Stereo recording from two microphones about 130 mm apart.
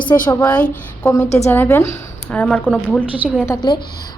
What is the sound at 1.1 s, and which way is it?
A woman's voice, 25° left (ahead or behind).